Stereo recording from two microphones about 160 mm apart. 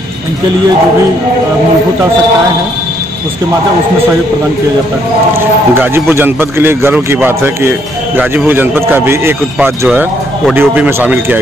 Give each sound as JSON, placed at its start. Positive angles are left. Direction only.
{"t": 5.8, "sound": "a man's voice", "side_deg": -15}